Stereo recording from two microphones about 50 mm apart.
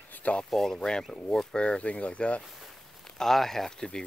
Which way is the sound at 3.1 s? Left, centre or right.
Centre.